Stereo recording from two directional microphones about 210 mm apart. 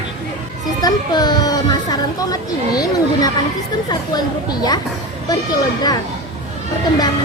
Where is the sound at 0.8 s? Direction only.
20° left (ahead or behind).